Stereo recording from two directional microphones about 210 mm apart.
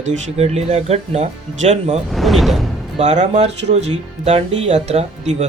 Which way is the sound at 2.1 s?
Centre (ahead or behind).